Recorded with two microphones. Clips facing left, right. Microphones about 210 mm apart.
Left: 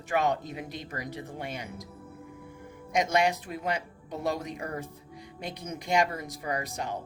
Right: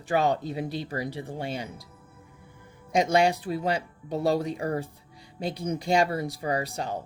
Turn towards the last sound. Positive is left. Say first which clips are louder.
# right 4 dB
turn(degrees=-30)  # may be behind; listen again after turning